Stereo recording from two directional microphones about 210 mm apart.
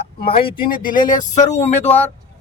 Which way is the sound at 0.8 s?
40° left (ahead or behind).